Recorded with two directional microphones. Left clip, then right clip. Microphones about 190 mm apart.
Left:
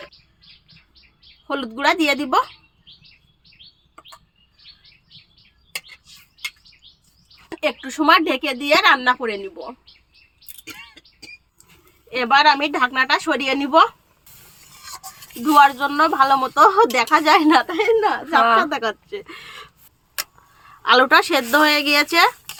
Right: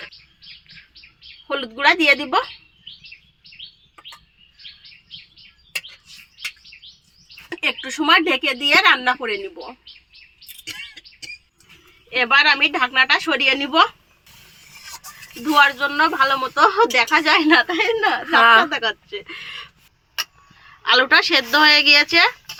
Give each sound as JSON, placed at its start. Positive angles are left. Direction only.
{"t": 1.5, "sound": "speech", "side_deg": 75}
{"t": 7.9, "sound": "speech", "side_deg": 70}
{"t": 8.7, "sound": "speech", "side_deg": 40}
{"t": 10.6, "sound": "a sound", "side_deg": 30}
{"t": 12.1, "sound": "speech", "side_deg": 70}
{"t": 15.5, "sound": "speech", "side_deg": 70}
{"t": 20.8, "sound": "speech", "side_deg": 70}